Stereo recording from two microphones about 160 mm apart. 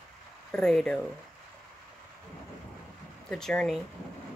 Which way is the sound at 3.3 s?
5° left (ahead or behind).